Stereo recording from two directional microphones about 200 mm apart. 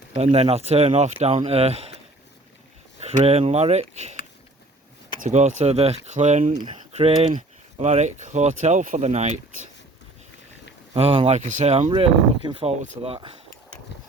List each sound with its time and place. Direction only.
0.2 s speech: 30° right (ahead or behind)
3.0 s speech: 30° right (ahead or behind)
5.2 s speech: 40° right (ahead or behind)
10.9 s speech: 30° right (ahead or behind)